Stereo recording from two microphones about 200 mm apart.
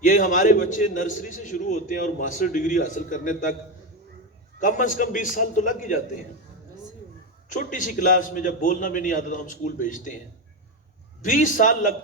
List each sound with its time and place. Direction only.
0.0 s a man's voice: 40° left (ahead or behind)
4.6 s a man's voice: 40° left (ahead or behind)
7.5 s a man's voice: 40° left (ahead or behind)
11.2 s a man's voice: 40° left (ahead or behind)